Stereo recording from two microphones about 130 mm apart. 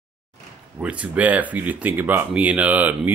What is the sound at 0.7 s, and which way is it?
Speech, 10° right (ahead or behind).